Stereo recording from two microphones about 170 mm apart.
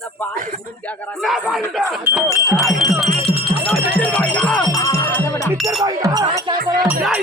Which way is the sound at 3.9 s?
5° left (ahead or behind).